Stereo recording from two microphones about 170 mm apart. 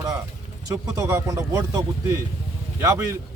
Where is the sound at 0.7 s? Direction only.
20° right (ahead or behind).